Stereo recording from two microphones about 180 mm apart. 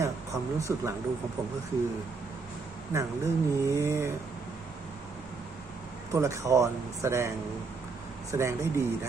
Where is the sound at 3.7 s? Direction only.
15° right (ahead or behind).